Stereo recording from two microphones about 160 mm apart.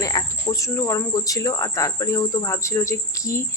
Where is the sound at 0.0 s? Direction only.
20° left (ahead or behind).